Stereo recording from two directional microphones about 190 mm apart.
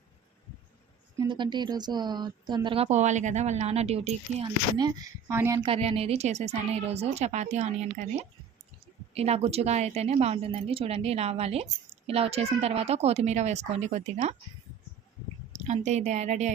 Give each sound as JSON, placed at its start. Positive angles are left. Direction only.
{"t": 1.2, "sound": "a woman's voice", "side_deg": -25}
{"t": 4.8, "sound": "speech", "side_deg": -15}
{"t": 5.6, "sound": "a woman's voice", "side_deg": -30}
{"t": 9.1, "sound": "a woman's voice", "side_deg": -35}
{"t": 15.6, "sound": "a woman's voice", "side_deg": -35}